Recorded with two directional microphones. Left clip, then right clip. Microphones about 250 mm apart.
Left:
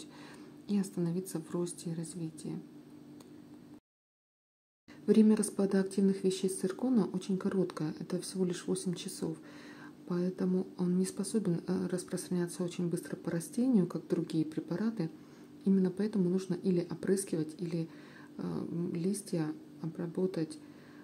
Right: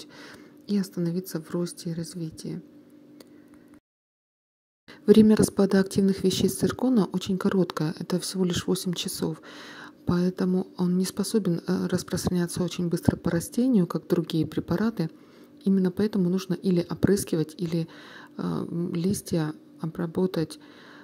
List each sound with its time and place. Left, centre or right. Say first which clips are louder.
0.2 s speech: right 5 dB; right
5.0 s speech: right 9 dB; right